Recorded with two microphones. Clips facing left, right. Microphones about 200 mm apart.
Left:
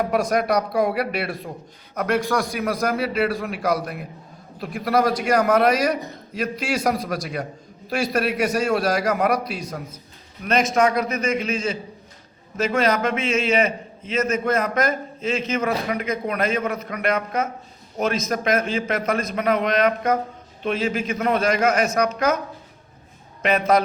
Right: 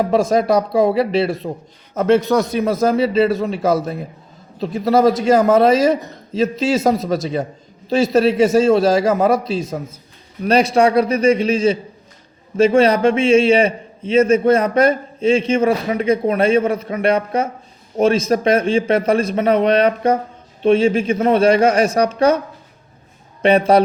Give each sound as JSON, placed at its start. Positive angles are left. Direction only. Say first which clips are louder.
{"t": 0.0, "sound": "a man's voice", "louder": "right 5 dB", "side_deg": -25}
{"t": 23.4, "sound": "a man's voice", "louder": "right 6 dB", "side_deg": -30}